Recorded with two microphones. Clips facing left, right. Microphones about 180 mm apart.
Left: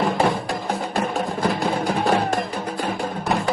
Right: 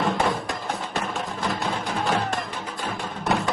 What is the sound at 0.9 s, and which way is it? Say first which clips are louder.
Music: left 5 dB; 55° left (ahead or behind).